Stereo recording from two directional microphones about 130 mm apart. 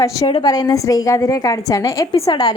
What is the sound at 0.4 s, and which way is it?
A woman's voice, 30° left (ahead or behind).